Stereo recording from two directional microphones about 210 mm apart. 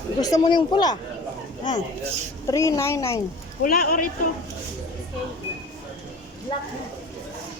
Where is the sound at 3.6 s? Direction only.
45° left (ahead or behind).